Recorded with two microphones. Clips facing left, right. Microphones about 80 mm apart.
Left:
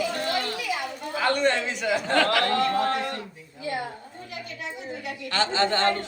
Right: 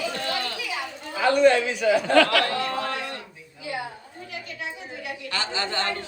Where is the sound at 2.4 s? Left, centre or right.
Left.